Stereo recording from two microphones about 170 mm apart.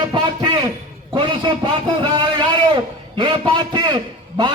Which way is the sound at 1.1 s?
30° right (ahead or behind).